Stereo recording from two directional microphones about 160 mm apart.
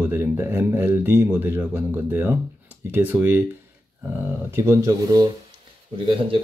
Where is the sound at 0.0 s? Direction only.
15° right (ahead or behind).